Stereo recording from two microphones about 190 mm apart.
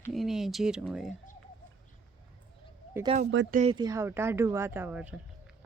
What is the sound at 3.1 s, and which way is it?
Speech, 35° right (ahead or behind).